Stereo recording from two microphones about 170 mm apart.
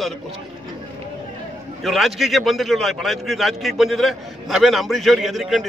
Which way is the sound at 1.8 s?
Centre (ahead or behind).